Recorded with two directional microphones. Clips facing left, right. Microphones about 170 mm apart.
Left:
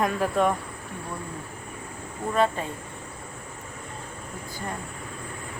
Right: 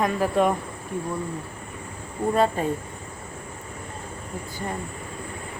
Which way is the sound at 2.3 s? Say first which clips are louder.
Right 1 dB; 40° right (ahead or behind).